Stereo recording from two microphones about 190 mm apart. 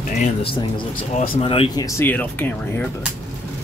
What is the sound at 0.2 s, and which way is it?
Speech, 30° left (ahead or behind).